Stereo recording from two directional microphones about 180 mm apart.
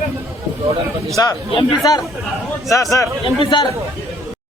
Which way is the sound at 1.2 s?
20° left (ahead or behind).